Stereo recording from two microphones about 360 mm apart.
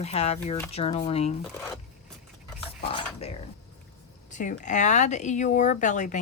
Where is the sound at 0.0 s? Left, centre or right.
Centre.